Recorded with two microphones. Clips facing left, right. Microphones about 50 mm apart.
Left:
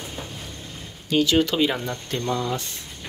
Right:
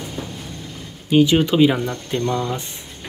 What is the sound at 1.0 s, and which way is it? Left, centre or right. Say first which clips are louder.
Speech: right 5 dB; right.